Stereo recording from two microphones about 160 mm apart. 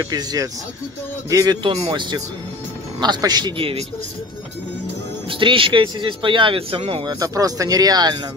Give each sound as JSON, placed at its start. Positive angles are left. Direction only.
{"t": 0.1, "sound": "speech", "side_deg": -25}
{"t": 1.7, "sound": "speech", "side_deg": -35}
{"t": 5.3, "sound": "speech", "side_deg": -35}
{"t": 7.2, "sound": "speech", "side_deg": -20}